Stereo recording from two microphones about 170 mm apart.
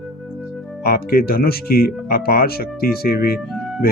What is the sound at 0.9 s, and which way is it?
Speech, 65° left (ahead or behind).